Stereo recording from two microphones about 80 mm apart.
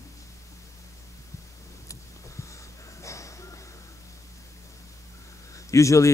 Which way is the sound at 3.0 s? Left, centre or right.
Left.